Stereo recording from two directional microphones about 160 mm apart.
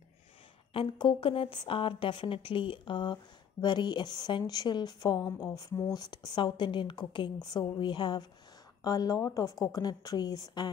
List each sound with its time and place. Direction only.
0.7 s a woman's voice: 30° left (ahead or behind)